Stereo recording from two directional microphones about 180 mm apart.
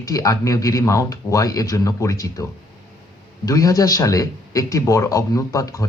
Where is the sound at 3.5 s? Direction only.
20° left (ahead or behind).